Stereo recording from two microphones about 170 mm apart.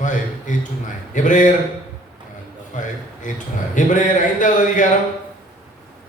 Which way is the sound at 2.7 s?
50° left (ahead or behind).